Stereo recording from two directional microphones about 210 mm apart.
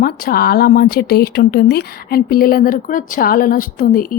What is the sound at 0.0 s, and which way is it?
Speech, 45° left (ahead or behind).